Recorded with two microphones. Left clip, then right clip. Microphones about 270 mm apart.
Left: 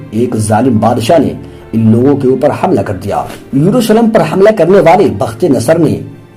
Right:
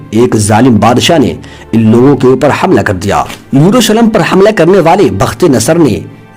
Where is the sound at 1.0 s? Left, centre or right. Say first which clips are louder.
Right 1 dB; right.